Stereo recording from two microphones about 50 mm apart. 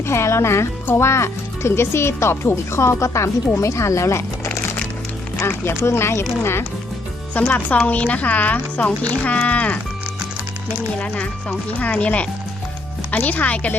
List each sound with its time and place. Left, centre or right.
0.0 s speech: left
5.6 s speech: left
7.3 s speech: left
11.0 s speech: left